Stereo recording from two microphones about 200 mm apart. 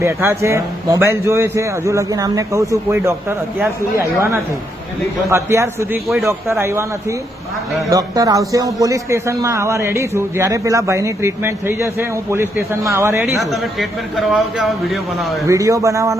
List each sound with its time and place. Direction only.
0.0 s a man's voice: 15° right (ahead or behind)
7.9 s a man's voice: 15° right (ahead or behind)
13.2 s speech: centre (ahead or behind)
15.4 s a man's voice: 15° right (ahead or behind)